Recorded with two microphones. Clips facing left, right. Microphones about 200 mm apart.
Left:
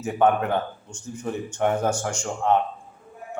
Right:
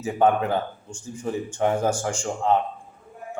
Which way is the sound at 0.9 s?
30° right (ahead or behind).